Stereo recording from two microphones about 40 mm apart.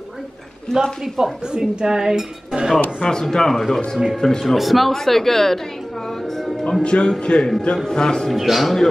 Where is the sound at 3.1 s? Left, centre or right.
Centre.